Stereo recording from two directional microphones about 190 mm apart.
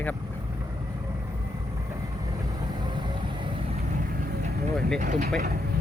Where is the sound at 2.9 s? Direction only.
25° right (ahead or behind).